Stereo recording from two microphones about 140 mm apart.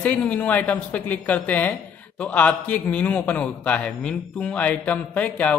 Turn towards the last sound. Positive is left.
turn(degrees=10)  # may be behind; listen again after turning